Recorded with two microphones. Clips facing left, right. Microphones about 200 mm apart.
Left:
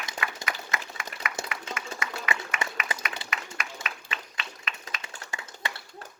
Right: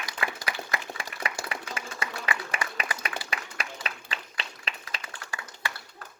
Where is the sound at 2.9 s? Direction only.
25° left (ahead or behind).